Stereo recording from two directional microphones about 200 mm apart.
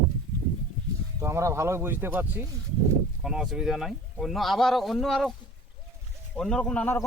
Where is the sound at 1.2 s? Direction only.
15° right (ahead or behind); by 5.4 s centre (ahead or behind).